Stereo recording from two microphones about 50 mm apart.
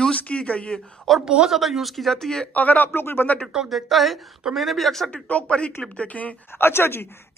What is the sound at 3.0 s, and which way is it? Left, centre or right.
Speech, left.